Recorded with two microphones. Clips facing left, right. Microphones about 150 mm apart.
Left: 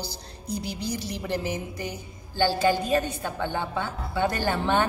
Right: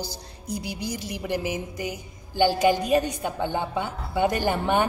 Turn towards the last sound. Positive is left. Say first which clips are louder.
# right 1 dB
turn(degrees=-15)  # may be behind; listen again after turning